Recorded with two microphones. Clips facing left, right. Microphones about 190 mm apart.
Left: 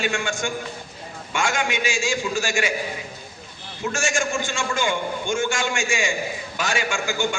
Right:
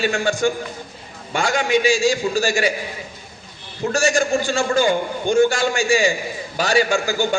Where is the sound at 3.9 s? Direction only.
35° right (ahead or behind).